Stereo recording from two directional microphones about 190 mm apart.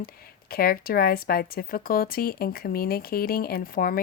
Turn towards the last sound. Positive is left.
turn(degrees=50)  # may be behind; listen again after turning